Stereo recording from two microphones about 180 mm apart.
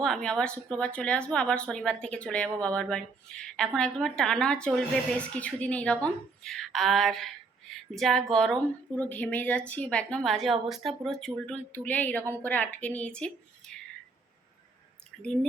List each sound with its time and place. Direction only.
0.0 s a woman's voice: 5° left (ahead or behind)
15.2 s a woman's voice: 5° left (ahead or behind)